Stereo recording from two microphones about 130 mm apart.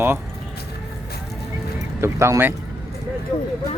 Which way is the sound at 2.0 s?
20° right (ahead or behind).